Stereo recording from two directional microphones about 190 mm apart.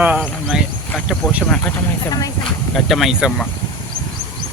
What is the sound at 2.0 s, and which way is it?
Speech, 20° left (ahead or behind).